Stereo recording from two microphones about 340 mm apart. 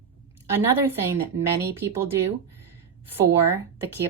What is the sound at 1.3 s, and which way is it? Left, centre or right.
Speech, right.